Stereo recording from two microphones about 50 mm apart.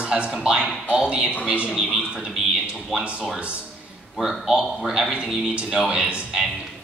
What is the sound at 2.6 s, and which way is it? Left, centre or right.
Speech, right.